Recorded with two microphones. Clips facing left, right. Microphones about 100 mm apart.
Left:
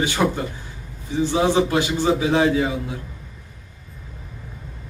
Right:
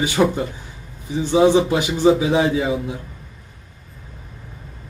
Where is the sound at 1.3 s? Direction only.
15° right (ahead or behind).